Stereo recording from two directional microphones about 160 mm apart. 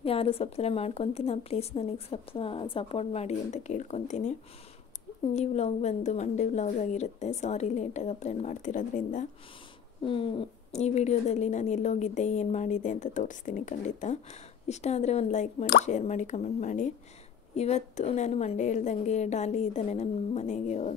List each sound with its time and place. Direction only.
0.0 s a woman's voice: 35° left (ahead or behind)
5.3 s speech: 45° left (ahead or behind)
10.0 s speech: 35° left (ahead or behind)